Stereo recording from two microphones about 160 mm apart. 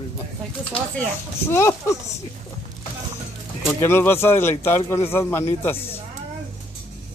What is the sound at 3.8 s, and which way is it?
Speech, 15° left (ahead or behind).